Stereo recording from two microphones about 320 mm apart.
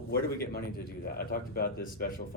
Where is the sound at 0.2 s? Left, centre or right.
Left.